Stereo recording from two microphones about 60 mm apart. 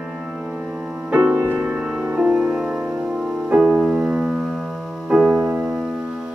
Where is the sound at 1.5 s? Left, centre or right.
Centre.